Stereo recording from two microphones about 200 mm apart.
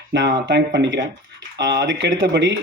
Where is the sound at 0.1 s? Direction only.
60° right (ahead or behind).